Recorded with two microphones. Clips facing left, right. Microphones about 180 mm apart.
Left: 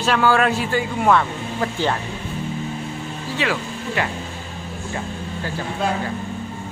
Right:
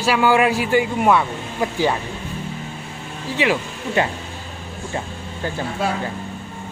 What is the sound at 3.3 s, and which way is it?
Speech, 20° right (ahead or behind).